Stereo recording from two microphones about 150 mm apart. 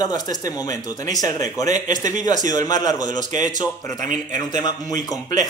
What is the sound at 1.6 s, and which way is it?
Speech, 55° right (ahead or behind).